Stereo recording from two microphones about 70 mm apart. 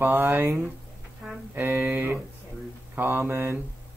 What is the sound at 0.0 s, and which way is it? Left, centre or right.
Speech, right.